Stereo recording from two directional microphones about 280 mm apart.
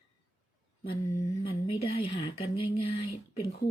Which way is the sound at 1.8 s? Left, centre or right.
Centre.